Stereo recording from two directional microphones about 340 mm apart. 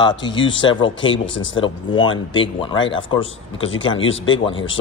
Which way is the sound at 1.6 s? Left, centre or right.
Centre.